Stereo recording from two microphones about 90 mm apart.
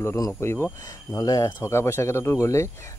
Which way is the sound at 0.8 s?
40° left (ahead or behind).